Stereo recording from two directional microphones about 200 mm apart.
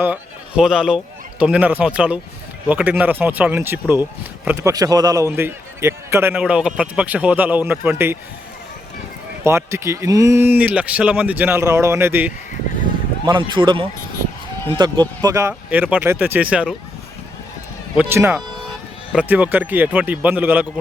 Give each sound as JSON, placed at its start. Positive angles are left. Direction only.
{"t": 0.0, "sound": "a man's voice", "side_deg": -5}
{"t": 9.4, "sound": "a man's voice", "side_deg": -15}
{"t": 13.2, "sound": "a man's voice", "side_deg": -25}
{"t": 15.2, "sound": "a man's voice", "side_deg": -15}
{"t": 17.9, "sound": "a man's voice", "side_deg": -10}